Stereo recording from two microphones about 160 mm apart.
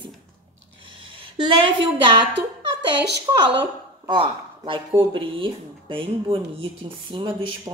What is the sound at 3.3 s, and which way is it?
Speech, 30° right (ahead or behind).